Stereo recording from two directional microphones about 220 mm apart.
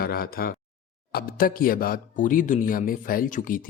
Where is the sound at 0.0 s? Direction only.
40° left (ahead or behind).